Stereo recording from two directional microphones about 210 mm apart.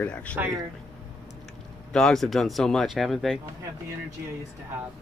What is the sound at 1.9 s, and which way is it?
Speech, 5° left (ahead or behind).